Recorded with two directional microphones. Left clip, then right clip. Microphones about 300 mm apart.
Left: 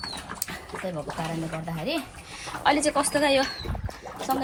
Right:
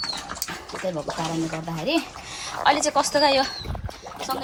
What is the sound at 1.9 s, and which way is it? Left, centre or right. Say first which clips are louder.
A child's voice: right 7 dB; centre.